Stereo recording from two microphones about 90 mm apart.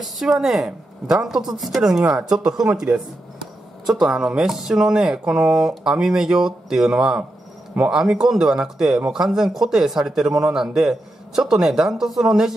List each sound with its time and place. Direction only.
0.0 s speech: centre (ahead or behind)
3.9 s speech: 5° right (ahead or behind)